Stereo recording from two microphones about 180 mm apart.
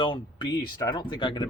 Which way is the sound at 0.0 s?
25° left (ahead or behind).